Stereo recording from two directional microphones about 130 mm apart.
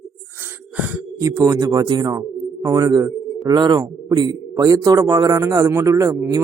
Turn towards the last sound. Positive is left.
turn(degrees=-25)  # may be behind; listen again after turning